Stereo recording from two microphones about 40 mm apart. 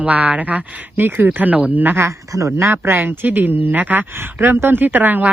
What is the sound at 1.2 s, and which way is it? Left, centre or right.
Speech, right.